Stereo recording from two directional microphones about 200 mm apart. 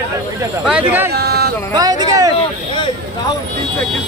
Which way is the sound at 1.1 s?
55° right (ahead or behind).